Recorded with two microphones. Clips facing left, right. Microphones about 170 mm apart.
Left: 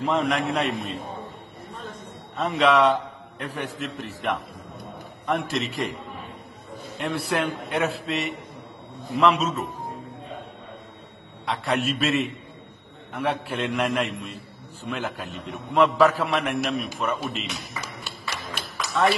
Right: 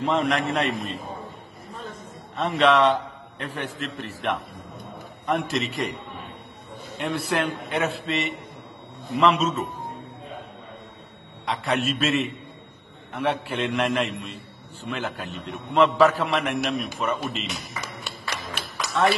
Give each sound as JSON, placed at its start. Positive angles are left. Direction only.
{"t": 0.0, "sound": "a man's voice", "side_deg": 0}
{"t": 7.0, "sound": "a man's voice", "side_deg": 0}
{"t": 11.4, "sound": "a man's voice", "side_deg": 0}